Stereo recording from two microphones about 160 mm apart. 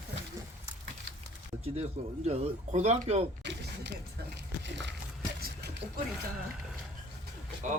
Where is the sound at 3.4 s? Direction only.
90° right.